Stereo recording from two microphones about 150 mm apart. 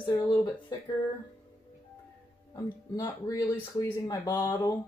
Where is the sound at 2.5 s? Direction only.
25° left (ahead or behind).